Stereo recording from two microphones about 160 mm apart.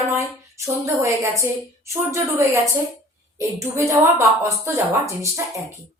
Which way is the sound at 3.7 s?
20° right (ahead or behind).